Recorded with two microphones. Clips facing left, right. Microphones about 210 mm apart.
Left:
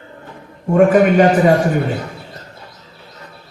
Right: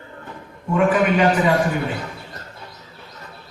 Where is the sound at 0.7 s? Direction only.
45° left (ahead or behind).